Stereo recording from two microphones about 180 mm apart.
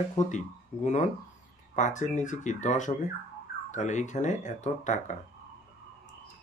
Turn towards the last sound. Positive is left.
turn(degrees=40)  # may be behind; listen again after turning